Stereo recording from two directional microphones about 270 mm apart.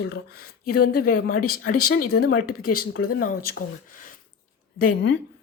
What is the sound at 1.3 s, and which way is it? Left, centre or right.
Speech, left.